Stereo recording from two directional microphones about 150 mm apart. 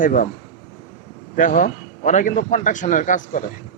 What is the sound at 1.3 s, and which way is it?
Speech, 60° left (ahead or behind).